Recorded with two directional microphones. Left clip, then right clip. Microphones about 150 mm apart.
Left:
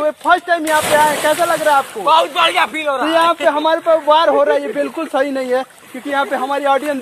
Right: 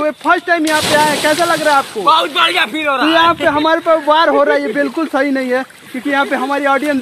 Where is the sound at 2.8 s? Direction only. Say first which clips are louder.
Right 5 dB; 5° right (ahead or behind).